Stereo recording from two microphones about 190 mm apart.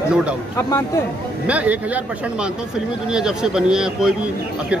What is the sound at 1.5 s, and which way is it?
Speech, 10° right (ahead or behind).